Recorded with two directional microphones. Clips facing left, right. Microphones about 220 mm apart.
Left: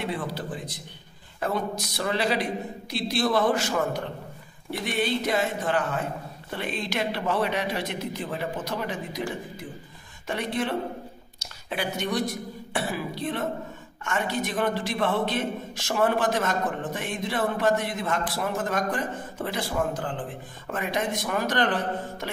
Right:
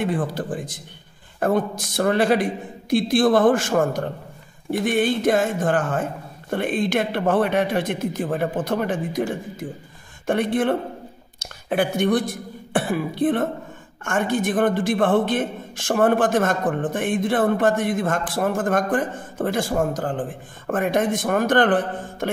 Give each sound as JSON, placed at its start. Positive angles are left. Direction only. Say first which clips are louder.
{"t": 0.0, "sound": "a man's voice", "louder": "right 7 dB", "side_deg": -50}